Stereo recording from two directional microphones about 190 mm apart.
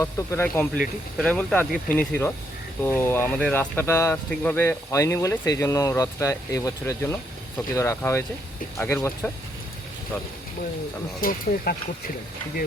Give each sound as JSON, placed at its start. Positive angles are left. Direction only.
{"t": 0.0, "sound": "speech", "side_deg": 15}
{"t": 11.2, "sound": "speech", "side_deg": 50}